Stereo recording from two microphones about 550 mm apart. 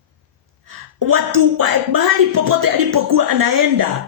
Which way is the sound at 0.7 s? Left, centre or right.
Right.